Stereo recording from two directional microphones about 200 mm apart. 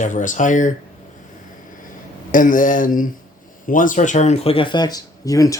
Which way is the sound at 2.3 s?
40° left (ahead or behind).